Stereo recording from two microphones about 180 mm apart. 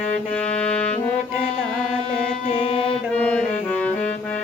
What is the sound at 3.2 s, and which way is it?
Music, 5° left (ahead or behind).